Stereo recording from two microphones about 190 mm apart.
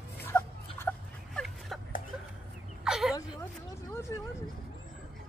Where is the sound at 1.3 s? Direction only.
Centre (ahead or behind).